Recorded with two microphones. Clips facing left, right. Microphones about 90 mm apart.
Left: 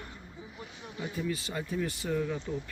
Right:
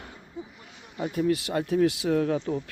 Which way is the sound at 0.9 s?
55° right (ahead or behind).